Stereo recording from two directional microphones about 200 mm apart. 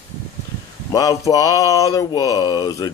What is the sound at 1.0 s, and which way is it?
Speech, 20° left (ahead or behind).